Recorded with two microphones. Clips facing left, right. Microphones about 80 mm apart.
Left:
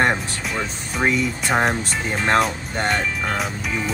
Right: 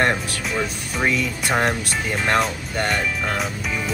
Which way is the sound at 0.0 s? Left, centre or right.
Centre.